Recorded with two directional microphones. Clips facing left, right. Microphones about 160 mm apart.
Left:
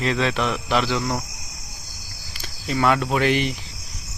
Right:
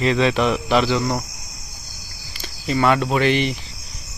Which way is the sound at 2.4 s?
Centre (ahead or behind).